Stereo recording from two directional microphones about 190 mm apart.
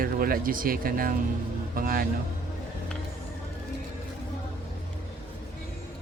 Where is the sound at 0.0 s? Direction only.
50° right (ahead or behind).